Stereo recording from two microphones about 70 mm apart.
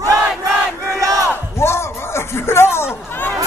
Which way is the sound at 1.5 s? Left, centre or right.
Left.